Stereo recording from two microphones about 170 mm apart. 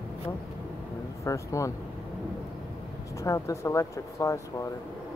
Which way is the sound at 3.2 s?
20° left (ahead or behind).